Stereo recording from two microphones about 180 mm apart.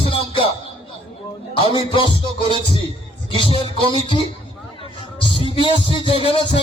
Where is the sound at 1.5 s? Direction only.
30° left (ahead or behind).